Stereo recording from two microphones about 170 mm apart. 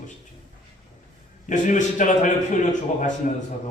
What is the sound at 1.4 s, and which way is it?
Speech, 45° left (ahead or behind).